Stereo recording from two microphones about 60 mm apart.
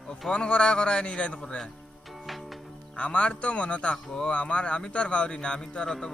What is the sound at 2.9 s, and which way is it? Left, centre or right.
A man's voice, centre.